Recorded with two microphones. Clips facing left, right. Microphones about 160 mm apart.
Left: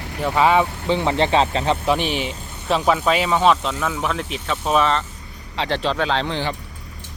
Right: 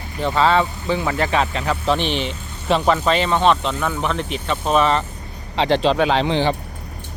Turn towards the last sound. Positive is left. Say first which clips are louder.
# right 5 dB
turn(degrees=-20)  # may be behind; listen again after turning